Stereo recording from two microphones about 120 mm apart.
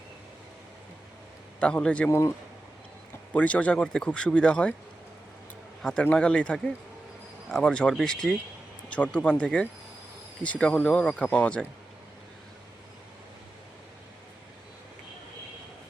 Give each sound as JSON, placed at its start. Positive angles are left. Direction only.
{"t": 1.5, "sound": "speech", "side_deg": 10}
{"t": 2.0, "sound": "speech", "side_deg": 25}
{"t": 3.3, "sound": "speech", "side_deg": 10}
{"t": 5.8, "sound": "speech", "side_deg": 10}